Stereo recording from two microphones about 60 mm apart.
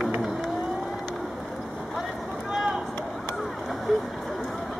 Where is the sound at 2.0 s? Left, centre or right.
Centre.